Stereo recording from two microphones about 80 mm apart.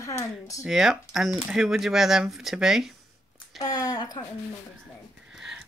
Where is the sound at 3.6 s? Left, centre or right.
Left.